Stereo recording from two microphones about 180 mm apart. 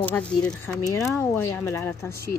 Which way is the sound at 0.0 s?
5° left (ahead or behind).